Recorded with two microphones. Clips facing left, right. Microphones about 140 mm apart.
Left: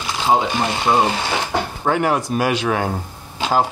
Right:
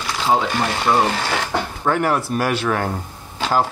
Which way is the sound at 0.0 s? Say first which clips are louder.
Left 1 dB; 15° left (ahead or behind).